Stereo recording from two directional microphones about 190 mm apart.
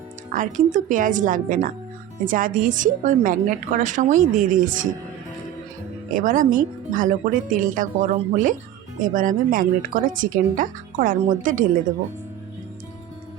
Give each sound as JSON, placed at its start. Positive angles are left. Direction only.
{"t": 0.3, "sound": "a woman's voice", "side_deg": -40}
{"t": 6.1, "sound": "a woman's voice", "side_deg": -45}